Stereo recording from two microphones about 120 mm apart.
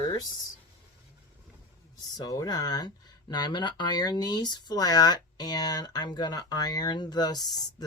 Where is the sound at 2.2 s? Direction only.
30° left (ahead or behind).